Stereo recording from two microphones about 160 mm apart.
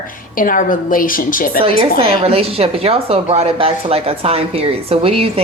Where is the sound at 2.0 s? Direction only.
35° right (ahead or behind).